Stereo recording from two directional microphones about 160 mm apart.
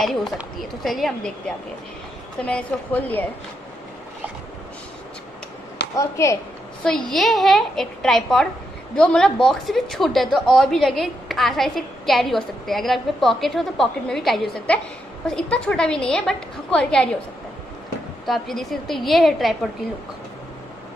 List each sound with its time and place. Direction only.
0.0 s a woman's voice: centre (ahead or behind)
2.4 s a woman's voice: 10° left (ahead or behind)
5.9 s a woman's voice: 20° left (ahead or behind)
7.1 s a woman's voice: centre (ahead or behind)
18.2 s a woman's voice: centre (ahead or behind)